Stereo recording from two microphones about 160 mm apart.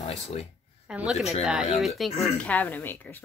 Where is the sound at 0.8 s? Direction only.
5° right (ahead or behind).